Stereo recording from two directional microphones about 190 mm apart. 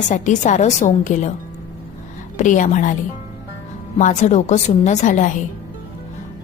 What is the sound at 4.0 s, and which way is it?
A woman's voice, 40° left (ahead or behind).